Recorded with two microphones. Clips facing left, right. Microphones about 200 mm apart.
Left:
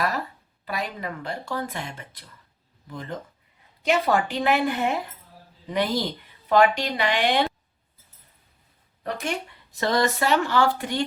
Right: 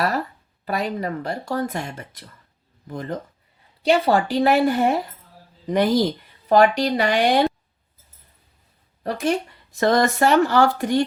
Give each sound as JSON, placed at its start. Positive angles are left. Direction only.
{"t": 0.6, "sound": "speech", "side_deg": -45}
{"t": 3.8, "sound": "a woman's voice", "side_deg": -30}
{"t": 9.0, "sound": "a woman's voice", "side_deg": -35}
{"t": 9.8, "sound": "speech", "side_deg": -50}